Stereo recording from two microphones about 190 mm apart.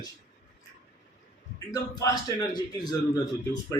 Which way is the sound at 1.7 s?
20° left (ahead or behind).